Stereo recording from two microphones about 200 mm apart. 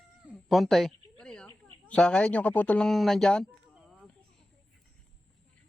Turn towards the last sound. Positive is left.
turn(degrees=0)  # may be behind; listen again after turning